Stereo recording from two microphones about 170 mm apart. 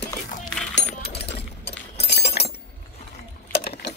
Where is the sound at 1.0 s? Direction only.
75° left (ahead or behind).